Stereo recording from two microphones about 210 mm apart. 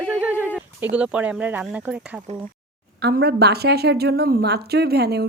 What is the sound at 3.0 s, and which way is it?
A woman's voice, 50° right (ahead or behind).